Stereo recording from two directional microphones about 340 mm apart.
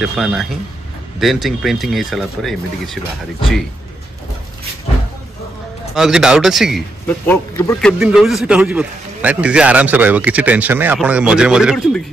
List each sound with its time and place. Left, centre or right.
0.0 s a man's voice: centre
5.9 s a man's voice: centre